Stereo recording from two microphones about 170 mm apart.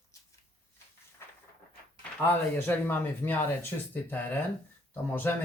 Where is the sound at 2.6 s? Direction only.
10° left (ahead or behind).